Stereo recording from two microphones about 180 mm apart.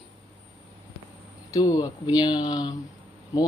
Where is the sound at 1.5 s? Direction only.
20° left (ahead or behind).